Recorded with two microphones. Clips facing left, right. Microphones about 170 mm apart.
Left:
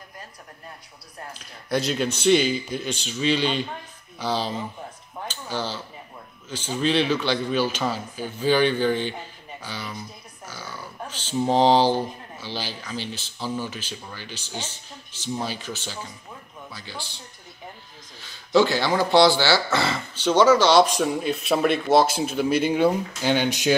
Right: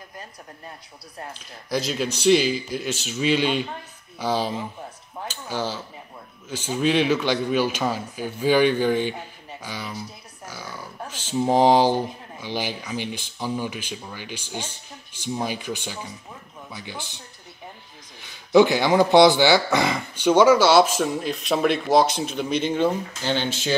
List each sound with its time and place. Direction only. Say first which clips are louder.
1.7 s a man's voice: left 1 dB; centre (ahead or behind); by 17.2 s 20° right (ahead or behind)
18.2 s speech: right 3 dB; 15° right (ahead or behind); by 23.8 s 15° left (ahead or behind)